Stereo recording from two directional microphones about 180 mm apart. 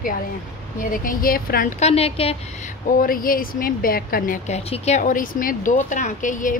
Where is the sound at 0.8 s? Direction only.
50° left (ahead or behind).